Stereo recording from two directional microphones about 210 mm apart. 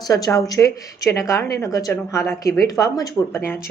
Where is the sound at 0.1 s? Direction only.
15° left (ahead or behind).